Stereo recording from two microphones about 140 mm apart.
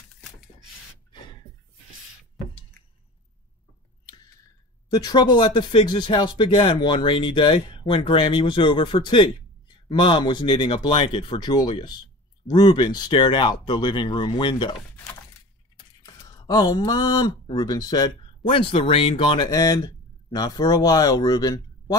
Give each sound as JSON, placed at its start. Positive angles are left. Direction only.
{"t": 4.9, "sound": "speech", "side_deg": 30}
{"t": 16.1, "sound": "speech", "side_deg": 30}
{"t": 18.5, "sound": "speech", "side_deg": 40}
{"t": 19.5, "sound": "speech", "side_deg": 25}